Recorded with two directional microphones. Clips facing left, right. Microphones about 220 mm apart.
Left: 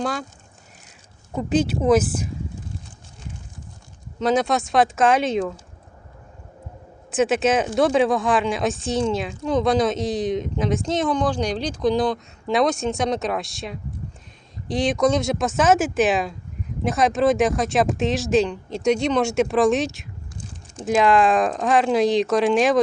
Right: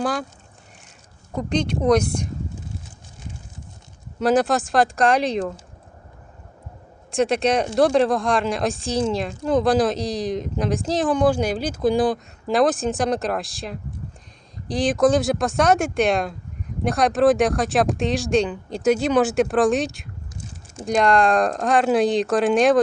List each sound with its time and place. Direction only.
0.0 s speech: centre (ahead or behind)
1.4 s speech: 5° left (ahead or behind)
4.2 s speech: 5° right (ahead or behind)
7.1 s speech: 5° left (ahead or behind)